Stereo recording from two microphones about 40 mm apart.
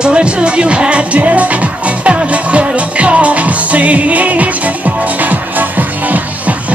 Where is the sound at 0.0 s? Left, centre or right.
Right.